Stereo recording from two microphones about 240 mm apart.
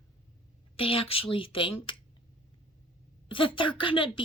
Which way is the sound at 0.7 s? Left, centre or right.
Left.